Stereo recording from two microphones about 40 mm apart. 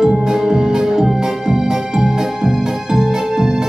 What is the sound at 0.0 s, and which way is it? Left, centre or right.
Music, centre.